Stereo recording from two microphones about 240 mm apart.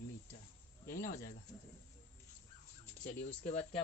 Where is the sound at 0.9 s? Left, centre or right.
Left.